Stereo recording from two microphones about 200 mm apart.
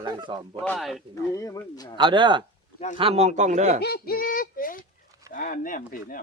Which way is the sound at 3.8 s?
55° left (ahead or behind).